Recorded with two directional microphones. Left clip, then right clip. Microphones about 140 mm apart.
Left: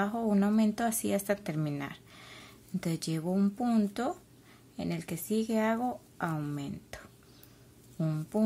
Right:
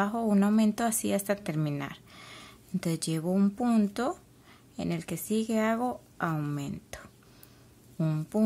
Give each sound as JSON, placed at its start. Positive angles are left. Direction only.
{"t": 0.0, "sound": "a woman's voice", "side_deg": -20}